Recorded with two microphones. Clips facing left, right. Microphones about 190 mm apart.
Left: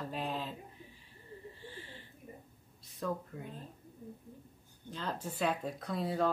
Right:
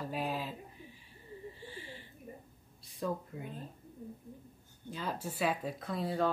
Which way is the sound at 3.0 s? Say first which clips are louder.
Right 1 dB; 10° right (ahead or behind).